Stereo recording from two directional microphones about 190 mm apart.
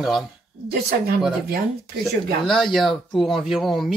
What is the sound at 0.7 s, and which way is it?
Speech, 55° right (ahead or behind).